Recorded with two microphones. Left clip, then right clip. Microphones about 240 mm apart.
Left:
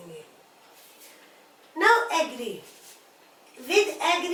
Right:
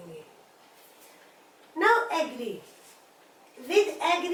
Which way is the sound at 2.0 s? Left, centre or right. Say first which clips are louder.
Left 3 dB; centre.